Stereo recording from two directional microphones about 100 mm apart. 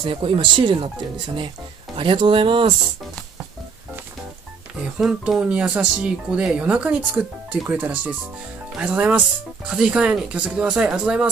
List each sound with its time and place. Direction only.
0.0 s speech: 55° right (ahead or behind)
4.9 s speech: 5° right (ahead or behind)